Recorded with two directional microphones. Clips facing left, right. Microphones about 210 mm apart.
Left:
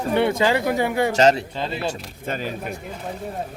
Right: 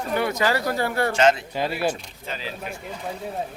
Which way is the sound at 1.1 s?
35° left (ahead or behind).